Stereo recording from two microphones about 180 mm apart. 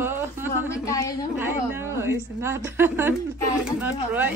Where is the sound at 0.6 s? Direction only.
20° left (ahead or behind).